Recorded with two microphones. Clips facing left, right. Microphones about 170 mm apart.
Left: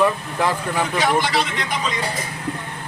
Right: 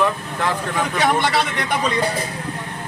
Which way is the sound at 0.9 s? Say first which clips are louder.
Right 2 dB; 60° right (ahead or behind).